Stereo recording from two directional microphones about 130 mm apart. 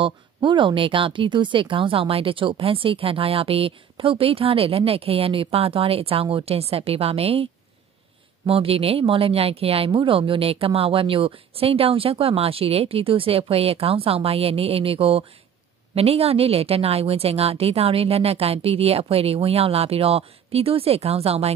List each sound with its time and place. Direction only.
0.0 s speech: 40° right (ahead or behind)
8.5 s speech: 45° right (ahead or behind)